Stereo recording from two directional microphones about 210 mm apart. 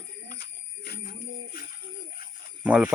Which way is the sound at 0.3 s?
50° left (ahead or behind).